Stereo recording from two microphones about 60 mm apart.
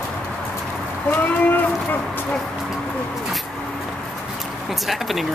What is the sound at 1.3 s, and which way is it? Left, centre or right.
Speech, left.